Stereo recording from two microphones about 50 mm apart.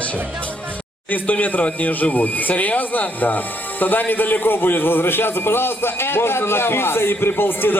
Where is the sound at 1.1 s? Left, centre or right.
Left.